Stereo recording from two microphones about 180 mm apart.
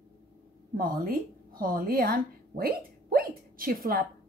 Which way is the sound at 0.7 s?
55° right (ahead or behind).